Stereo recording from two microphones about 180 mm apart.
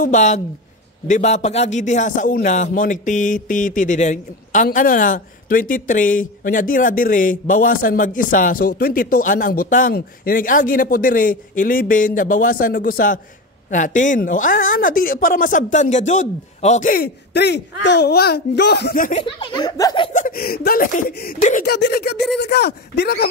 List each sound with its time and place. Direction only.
0.0 s a woman's voice: 40° left (ahead or behind)
19.1 s speech: 30° left (ahead or behind)
20.1 s a man's voice: 45° left (ahead or behind)
21.1 s a man's voice: 60° left (ahead or behind)
21.4 s a man's voice: 45° left (ahead or behind)
21.6 s a man's voice: 65° left (ahead or behind)